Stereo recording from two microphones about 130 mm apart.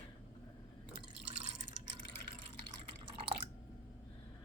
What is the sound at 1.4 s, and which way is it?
Drip, 60° right (ahead or behind).